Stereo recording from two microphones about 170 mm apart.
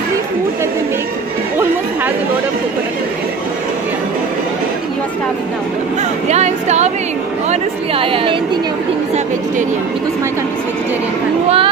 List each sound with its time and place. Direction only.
6.2 s a woman's voice: 40° right (ahead or behind)
11.4 s speech: 35° right (ahead or behind)